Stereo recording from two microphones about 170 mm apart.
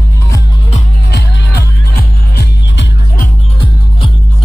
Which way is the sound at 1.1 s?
75° left (ahead or behind).